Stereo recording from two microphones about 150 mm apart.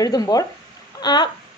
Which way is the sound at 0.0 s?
25° left (ahead or behind).